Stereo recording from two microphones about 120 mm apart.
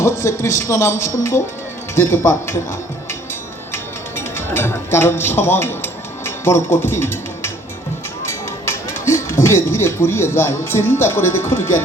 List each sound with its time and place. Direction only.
0.0 s speech: 20° left (ahead or behind)
3.7 s music: 20° left (ahead or behind)
8.6 s speech: 20° left (ahead or behind)